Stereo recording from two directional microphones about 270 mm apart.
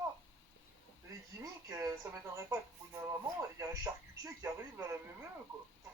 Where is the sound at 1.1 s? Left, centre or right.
Centre.